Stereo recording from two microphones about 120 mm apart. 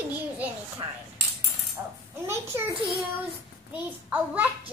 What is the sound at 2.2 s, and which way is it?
Speech, 20° right (ahead or behind).